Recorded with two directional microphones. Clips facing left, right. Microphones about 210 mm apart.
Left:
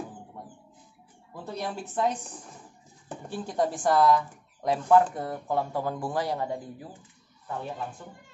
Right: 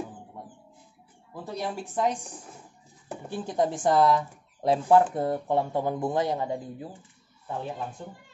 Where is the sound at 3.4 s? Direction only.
20° right (ahead or behind).